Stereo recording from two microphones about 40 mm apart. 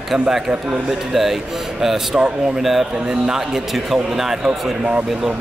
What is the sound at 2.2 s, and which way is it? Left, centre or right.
Speech, right.